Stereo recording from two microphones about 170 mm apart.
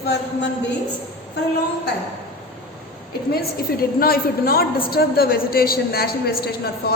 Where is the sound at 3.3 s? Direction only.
60° left (ahead or behind).